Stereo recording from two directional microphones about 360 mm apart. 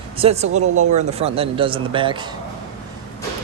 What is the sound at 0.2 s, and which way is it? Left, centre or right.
Speech, centre.